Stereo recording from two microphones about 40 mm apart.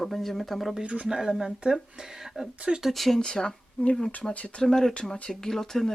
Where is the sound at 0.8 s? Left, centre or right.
Right.